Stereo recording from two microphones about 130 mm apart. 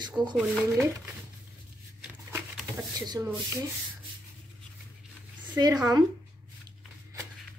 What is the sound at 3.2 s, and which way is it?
Speech, 15° right (ahead or behind).